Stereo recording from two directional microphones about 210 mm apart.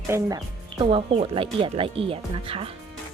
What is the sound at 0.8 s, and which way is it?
Speech, 25° right (ahead or behind).